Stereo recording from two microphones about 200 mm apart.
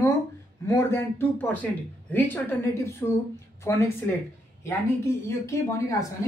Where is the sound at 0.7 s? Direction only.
10° left (ahead or behind).